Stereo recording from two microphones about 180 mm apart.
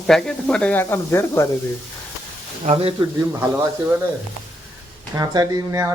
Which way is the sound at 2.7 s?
35° right (ahead or behind).